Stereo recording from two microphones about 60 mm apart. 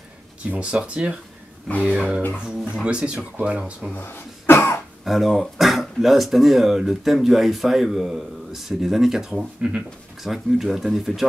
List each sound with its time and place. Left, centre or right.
0.5 s speech: right
2.4 s speech: centre
3.9 s cough: left
5.0 s speech: centre
9.3 s speech: centre
10.2 s speech: centre